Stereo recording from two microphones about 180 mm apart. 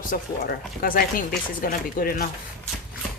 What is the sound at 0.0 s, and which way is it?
Speech, 50° left (ahead or behind).